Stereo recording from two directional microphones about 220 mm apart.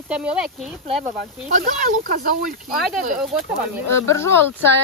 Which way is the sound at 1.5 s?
35° right (ahead or behind).